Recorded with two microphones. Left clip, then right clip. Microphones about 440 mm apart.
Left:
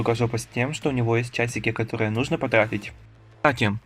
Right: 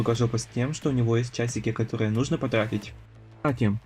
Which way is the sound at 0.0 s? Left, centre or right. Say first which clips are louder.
Left 3 dB; centre.